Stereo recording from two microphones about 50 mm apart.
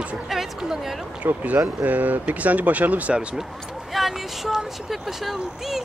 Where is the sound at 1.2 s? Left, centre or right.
Right.